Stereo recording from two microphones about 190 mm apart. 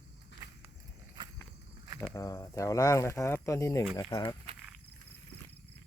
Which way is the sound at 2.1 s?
15° left (ahead or behind).